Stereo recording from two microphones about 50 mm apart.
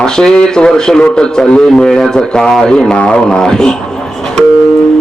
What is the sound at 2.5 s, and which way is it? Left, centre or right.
A man's voice, centre.